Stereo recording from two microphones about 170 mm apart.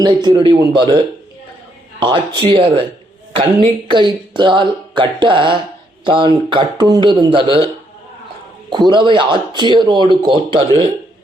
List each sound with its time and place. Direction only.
0.0 s speech: 25° right (ahead or behind)
8.7 s speech: 30° right (ahead or behind)